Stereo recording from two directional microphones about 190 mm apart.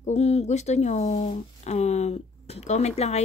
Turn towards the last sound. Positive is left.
turn(degrees=35)  # may be behind; listen again after turning